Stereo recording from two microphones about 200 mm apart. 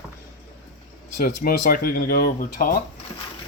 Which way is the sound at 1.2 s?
50° left (ahead or behind).